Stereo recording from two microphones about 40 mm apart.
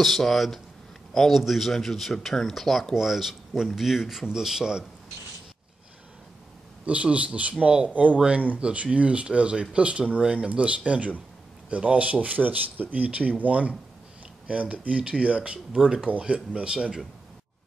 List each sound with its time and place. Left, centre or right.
0.0 s a man's voice: centre
2.9 s speech: centre
6.9 s speech: right
15.7 s speech: centre
16.1 s speech: right